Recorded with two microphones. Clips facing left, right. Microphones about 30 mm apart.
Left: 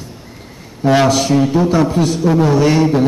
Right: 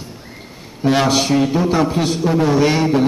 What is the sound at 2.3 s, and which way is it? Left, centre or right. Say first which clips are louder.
Speech: left 2 dB; centre.